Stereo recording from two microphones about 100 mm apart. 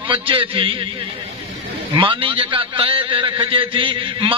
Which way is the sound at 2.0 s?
60° right (ahead or behind).